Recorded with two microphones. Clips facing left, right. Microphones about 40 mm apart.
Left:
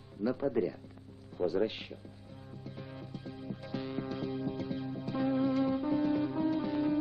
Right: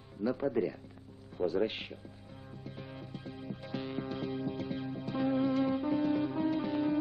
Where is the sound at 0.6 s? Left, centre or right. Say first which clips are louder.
Left 1 dB; centre.